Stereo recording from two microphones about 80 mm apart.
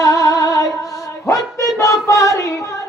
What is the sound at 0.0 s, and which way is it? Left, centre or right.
Female singing, left.